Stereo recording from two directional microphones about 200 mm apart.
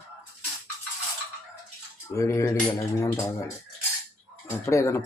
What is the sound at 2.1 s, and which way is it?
Speech, 15° left (ahead or behind).